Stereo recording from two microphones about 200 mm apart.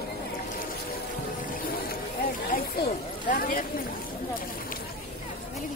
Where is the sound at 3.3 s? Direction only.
45° left (ahead or behind).